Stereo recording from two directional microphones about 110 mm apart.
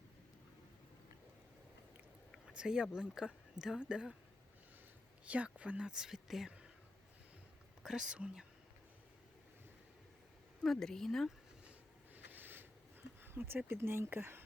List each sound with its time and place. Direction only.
2.3 s speech: 10° right (ahead or behind)
5.2 s speech: 10° right (ahead or behind)
7.8 s speech: 5° right (ahead or behind)
10.6 s speech: 5° left (ahead or behind)
12.1 s a sound: 15° right (ahead or behind)